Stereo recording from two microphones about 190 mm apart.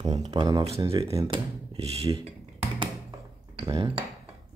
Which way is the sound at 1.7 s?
30° right (ahead or behind).